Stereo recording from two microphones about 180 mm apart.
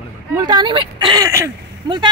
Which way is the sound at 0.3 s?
20° right (ahead or behind).